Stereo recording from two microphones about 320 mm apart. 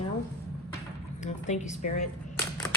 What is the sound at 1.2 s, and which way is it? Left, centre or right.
Speech, left.